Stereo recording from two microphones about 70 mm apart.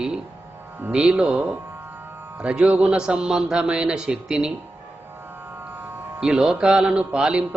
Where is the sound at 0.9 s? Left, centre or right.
Centre.